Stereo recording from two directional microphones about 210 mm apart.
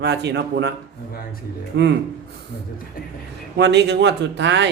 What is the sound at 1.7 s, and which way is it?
Speech, 55° right (ahead or behind).